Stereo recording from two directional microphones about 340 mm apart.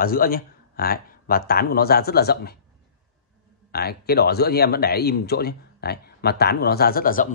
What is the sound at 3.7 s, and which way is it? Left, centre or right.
Speech, left.